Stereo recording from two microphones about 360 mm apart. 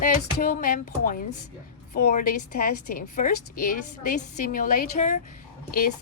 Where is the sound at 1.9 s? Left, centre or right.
Left.